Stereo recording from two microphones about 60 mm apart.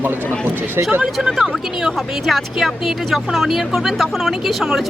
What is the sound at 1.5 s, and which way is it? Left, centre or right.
Speech, centre.